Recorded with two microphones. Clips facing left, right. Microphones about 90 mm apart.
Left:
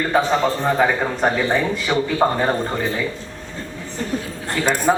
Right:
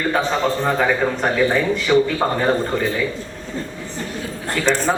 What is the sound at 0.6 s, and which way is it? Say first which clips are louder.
A man's voice: even; 10° left (ahead or behind).